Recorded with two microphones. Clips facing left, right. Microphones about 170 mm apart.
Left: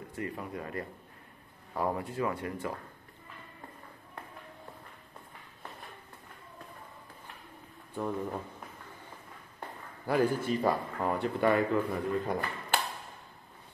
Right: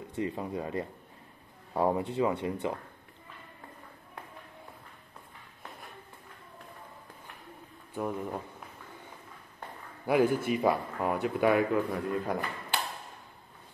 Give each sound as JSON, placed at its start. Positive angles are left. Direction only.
{"t": 0.1, "sound": "speech", "side_deg": -20}
{"t": 7.9, "sound": "speech", "side_deg": -10}
{"t": 10.0, "sound": "speech", "side_deg": -15}